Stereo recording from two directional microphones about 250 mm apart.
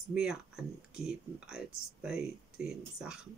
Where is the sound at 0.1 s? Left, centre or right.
Centre.